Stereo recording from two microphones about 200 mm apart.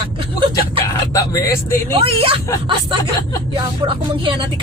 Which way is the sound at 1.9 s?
25° right (ahead or behind).